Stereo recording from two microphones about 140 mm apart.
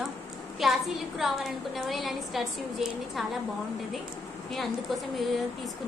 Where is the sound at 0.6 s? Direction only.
Centre (ahead or behind).